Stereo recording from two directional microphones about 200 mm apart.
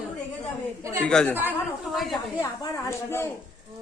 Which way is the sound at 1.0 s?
5° left (ahead or behind).